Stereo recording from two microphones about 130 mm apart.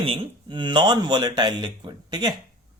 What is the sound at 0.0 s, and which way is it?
Speech, 40° right (ahead or behind).